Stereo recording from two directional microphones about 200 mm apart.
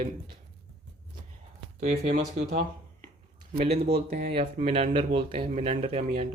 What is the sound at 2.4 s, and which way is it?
Speech, 30° right (ahead or behind).